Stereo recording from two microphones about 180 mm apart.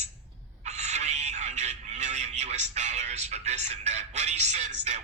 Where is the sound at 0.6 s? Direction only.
40° right (ahead or behind).